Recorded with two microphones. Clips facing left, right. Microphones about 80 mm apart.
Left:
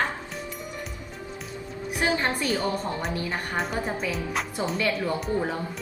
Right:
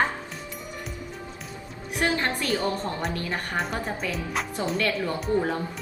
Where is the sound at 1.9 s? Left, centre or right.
Centre.